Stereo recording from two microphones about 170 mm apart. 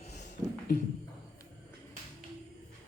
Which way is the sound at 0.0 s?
45° left (ahead or behind).